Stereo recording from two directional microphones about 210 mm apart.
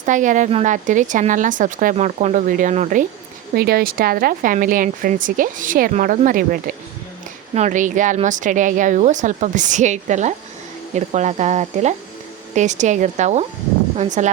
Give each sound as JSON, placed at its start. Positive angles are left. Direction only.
{"t": 0.0, "sound": "speech", "side_deg": -35}
{"t": 3.5, "sound": "speech", "side_deg": -45}